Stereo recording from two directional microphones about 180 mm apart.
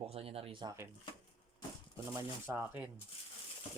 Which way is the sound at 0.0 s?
35° right (ahead or behind).